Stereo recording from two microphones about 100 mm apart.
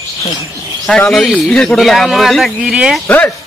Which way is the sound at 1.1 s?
Centre (ahead or behind).